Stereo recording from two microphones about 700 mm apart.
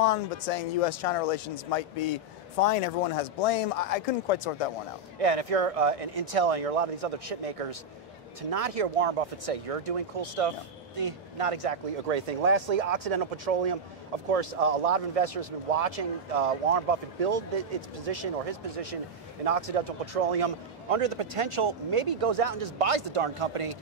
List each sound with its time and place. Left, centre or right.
0.0 s speech: left
5.2 s a man's voice: right